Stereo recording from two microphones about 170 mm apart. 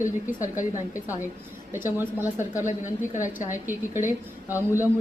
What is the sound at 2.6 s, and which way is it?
Speech, 45° left (ahead or behind).